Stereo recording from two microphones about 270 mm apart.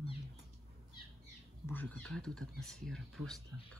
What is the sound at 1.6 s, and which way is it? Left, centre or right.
Speech, centre.